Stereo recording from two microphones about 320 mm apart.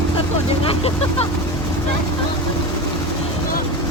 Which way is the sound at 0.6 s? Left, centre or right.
Centre.